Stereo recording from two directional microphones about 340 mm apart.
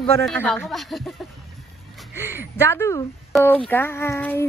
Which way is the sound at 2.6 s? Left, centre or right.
Centre.